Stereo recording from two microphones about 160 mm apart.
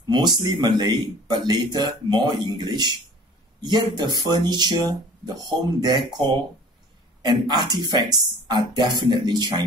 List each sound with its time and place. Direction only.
0.1 s speech: 25° right (ahead or behind)